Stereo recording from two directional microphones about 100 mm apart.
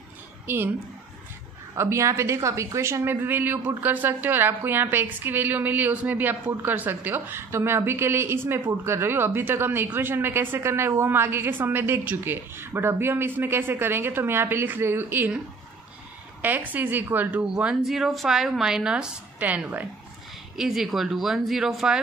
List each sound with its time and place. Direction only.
1.8 s a woman's voice: 30° right (ahead or behind)
20.5 s speech: 5° right (ahead or behind)